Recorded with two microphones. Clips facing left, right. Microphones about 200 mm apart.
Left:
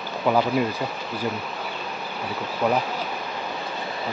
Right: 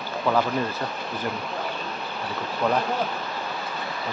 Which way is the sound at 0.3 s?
10° left (ahead or behind).